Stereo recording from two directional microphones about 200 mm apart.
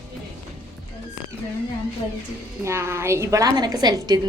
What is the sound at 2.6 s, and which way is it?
A woman's voice, 15° right (ahead or behind).